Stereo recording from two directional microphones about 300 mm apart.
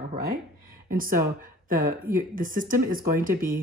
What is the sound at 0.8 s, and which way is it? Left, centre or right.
Speech, right.